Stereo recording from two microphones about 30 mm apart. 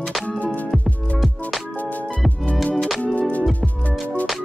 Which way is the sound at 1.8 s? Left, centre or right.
Left.